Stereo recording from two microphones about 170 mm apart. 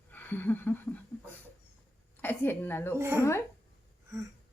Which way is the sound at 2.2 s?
10° left (ahead or behind).